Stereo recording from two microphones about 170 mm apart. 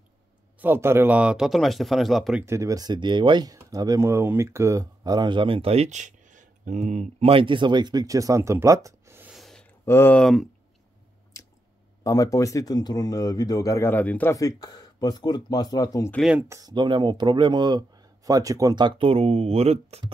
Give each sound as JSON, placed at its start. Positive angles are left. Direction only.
{"t": 0.6, "sound": "speech", "side_deg": -15}
{"t": 2.4, "sound": "speech", "side_deg": -20}
{"t": 9.3, "sound": "a sound", "side_deg": 0}
{"t": 9.8, "sound": "speech", "side_deg": 10}
{"t": 11.3, "sound": "squish", "side_deg": 20}
{"t": 12.0, "sound": "speech", "side_deg": 20}
{"t": 16.1, "sound": "speech", "side_deg": 0}
{"t": 16.4, "sound": "speech", "side_deg": -20}